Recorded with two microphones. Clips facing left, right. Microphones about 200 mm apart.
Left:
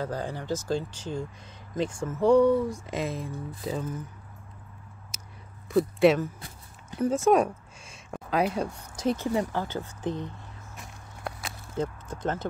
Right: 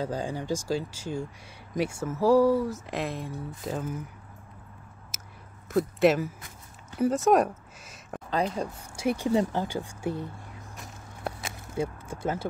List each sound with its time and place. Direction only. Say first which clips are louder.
0.0 s speech: right 1 dB; 15° right (ahead or behind)
5.1 s biting: right 1 dB; 5° right (ahead or behind)
5.7 s speech: left 2 dB; centre (ahead or behind)
8.3 s speech: left 2 dB; 10° left (ahead or behind)
8.9 s speech: even; 10° right (ahead or behind)
9.3 s speech: right 2 dB; 20° right (ahead or behind)
11.7 s speech: even; 10° right (ahead or behind)